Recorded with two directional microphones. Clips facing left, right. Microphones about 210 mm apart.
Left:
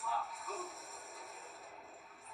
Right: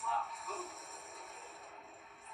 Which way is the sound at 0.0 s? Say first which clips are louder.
Right 1 dB; centre (ahead or behind).